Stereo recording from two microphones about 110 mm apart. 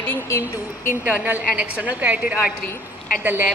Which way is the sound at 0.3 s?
25° left (ahead or behind).